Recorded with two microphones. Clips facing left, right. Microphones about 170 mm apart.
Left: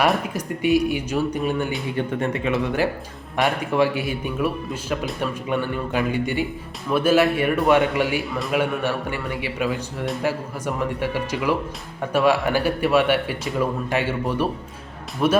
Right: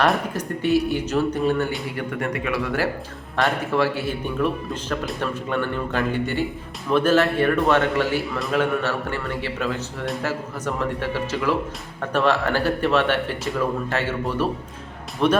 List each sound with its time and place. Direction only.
0.3 s speech: 15° left (ahead or behind)
2.0 s speech: 25° left (ahead or behind); by 15.4 s 5° left (ahead or behind)